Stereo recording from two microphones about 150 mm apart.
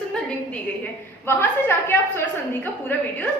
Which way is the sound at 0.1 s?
5° left (ahead or behind).